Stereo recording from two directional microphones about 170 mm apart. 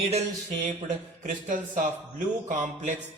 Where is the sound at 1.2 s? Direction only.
50° right (ahead or behind).